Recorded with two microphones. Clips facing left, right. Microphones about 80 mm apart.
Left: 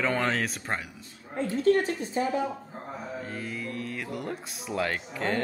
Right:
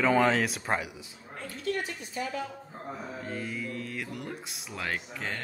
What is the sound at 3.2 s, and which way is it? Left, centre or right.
Speech, centre.